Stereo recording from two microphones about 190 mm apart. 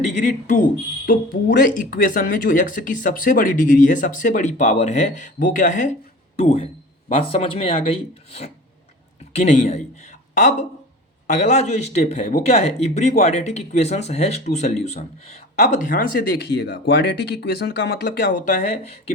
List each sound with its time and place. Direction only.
0.2 s speech: 40° left (ahead or behind)